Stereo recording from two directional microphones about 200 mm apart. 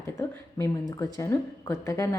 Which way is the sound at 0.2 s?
15° left (ahead or behind).